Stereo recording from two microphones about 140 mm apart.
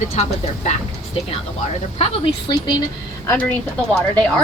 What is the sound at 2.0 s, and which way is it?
Speech, 45° left (ahead or behind).